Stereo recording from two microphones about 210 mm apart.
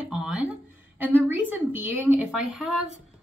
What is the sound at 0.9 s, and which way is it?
Speech, 10° right (ahead or behind).